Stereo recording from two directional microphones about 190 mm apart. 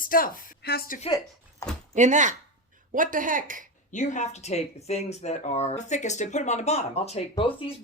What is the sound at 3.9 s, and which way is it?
Speech, 40° left (ahead or behind).